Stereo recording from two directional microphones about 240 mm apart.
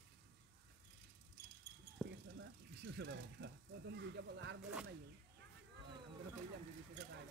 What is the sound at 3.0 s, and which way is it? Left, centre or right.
Speech, right.